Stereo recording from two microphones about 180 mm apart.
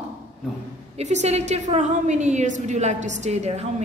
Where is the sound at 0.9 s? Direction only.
40° right (ahead or behind).